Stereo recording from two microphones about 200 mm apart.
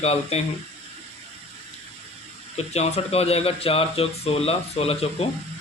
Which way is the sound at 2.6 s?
30° left (ahead or behind).